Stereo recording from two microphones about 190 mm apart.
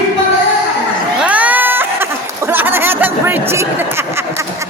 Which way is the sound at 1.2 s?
5° right (ahead or behind).